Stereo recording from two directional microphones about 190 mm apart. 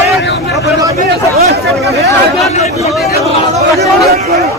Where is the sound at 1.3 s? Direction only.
55° right (ahead or behind).